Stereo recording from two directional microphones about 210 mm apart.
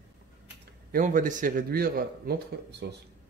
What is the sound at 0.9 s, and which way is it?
Speech, 40° right (ahead or behind).